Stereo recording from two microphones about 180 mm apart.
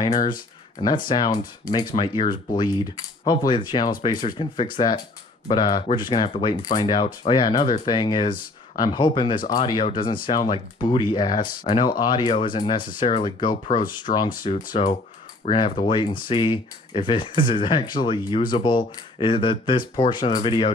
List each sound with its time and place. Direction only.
0.3 s speech: 25° left (ahead or behind)
14.1 s speech: 40° left (ahead or behind)
14.6 s speech: 50° left (ahead or behind)
15.5 s speech: 30° left (ahead or behind)